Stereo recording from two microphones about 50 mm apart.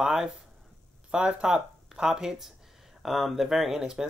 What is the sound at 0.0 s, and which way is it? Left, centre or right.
Speech, centre.